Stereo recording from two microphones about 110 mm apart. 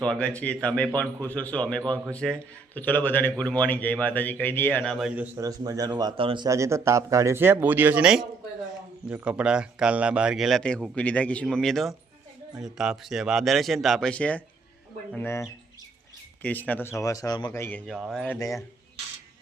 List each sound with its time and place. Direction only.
0.0 s a man's voice: 10° left (ahead or behind)
4.8 s speech: 5° left (ahead or behind)
5.0 s a man's voice: 15° right (ahead or behind)
5.4 s a man's voice: 35° right (ahead or behind)
6.1 s speech: 50° right (ahead or behind)
6.5 s speech: 25° right (ahead or behind)
9.0 s a man's voice: 10° right (ahead or behind)
10.6 s a man's voice: 10° left (ahead or behind)
14.1 s a man's voice: 10° left (ahead or behind)
15.1 s a man's voice: 20° left (ahead or behind)
17.0 s speech: 30° left (ahead or behind)
17.5 s speech: 25° left (ahead or behind)
17.9 s speech: centre (ahead or behind)